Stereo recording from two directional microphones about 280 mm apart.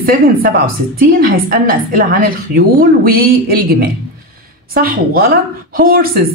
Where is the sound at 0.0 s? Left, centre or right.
Right.